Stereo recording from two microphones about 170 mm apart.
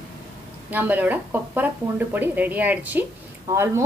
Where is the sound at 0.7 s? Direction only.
10° right (ahead or behind).